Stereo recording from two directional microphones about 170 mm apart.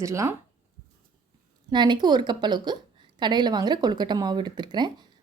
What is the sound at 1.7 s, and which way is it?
Speech, 25° right (ahead or behind).